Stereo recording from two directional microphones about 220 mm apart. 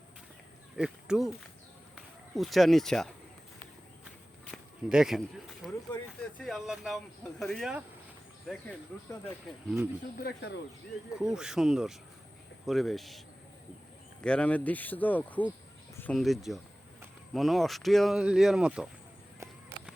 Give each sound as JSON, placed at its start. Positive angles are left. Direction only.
{"t": 0.8, "sound": "speech", "side_deg": -5}
{"t": 4.5, "sound": "a sound", "side_deg": -5}
{"t": 5.6, "sound": "speech", "side_deg": 0}
{"t": 9.6, "sound": "speech", "side_deg": -10}
{"t": 10.2, "sound": "speech", "side_deg": 45}
{"t": 11.1, "sound": "speech", "side_deg": -5}
{"t": 14.3, "sound": "speech", "side_deg": 5}